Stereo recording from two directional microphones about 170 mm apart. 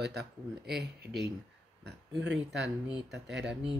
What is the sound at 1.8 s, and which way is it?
Speech, 90° right.